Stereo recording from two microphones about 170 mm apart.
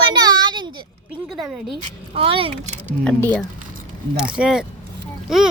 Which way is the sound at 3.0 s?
5° left (ahead or behind).